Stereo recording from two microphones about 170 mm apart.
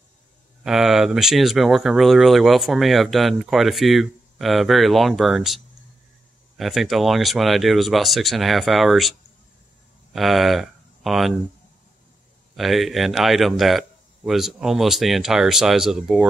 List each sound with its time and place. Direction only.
0.7 s speech: centre (ahead or behind)
6.6 s speech: centre (ahead or behind)
10.1 s speech: centre (ahead or behind)
12.5 s speech: centre (ahead or behind)